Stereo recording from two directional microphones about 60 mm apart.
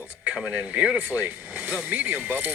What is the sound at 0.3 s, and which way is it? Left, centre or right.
Speech, centre.